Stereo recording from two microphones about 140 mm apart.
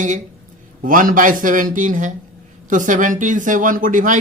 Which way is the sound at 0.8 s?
75° right (ahead or behind).